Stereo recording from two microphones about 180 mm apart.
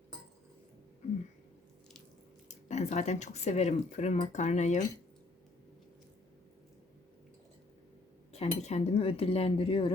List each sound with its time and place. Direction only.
2.5 s speech: 40° left (ahead or behind)
8.3 s speech: 35° left (ahead or behind)